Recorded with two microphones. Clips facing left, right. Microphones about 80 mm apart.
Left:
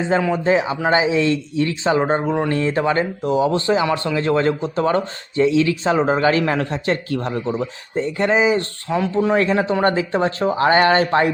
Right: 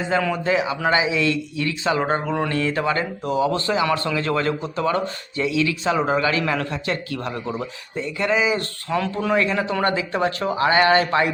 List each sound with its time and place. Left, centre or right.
0.1 s a man's voice: left
8.9 s a man's voice: centre; by 11.3 s left